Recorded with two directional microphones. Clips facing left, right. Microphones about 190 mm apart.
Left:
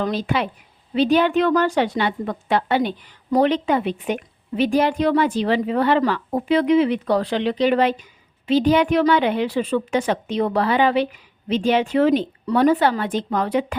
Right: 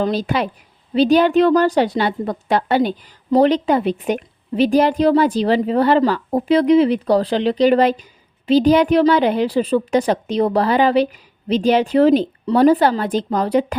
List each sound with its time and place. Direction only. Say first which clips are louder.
0.0 s a woman's voice: right 3 dB; 35° right (ahead or behind)